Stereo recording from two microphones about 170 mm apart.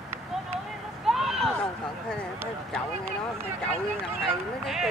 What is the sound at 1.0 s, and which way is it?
Horse, centre (ahead or behind).